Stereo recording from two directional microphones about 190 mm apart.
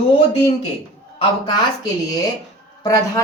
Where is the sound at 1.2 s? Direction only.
20° left (ahead or behind).